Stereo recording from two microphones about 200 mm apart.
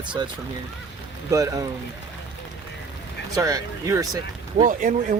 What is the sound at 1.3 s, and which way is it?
Speech, 15° right (ahead or behind).